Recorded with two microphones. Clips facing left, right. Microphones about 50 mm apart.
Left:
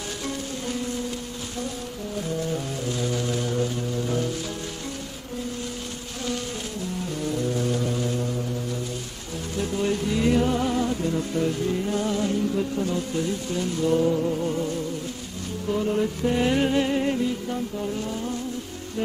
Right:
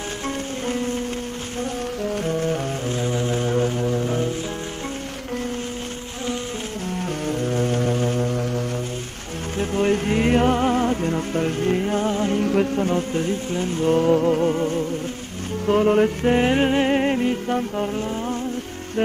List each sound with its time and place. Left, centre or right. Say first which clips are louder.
0.7 s music: right 5 dB; right
2.0 s music: right 5 dB; right
6.9 s music: right 4 dB; right
9.6 s music: right 5 dB; right
12.4 s music: right 5 dB; right
12.8 s music: right 4 dB; right
14.5 s music: right 5 dB; right
15.6 s music: right 7 dB; right